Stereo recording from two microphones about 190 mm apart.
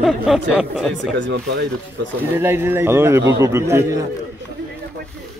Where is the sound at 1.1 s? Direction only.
70° right (ahead or behind).